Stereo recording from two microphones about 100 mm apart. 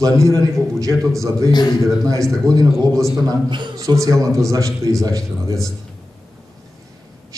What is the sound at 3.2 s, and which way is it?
Speech, 50° right (ahead or behind).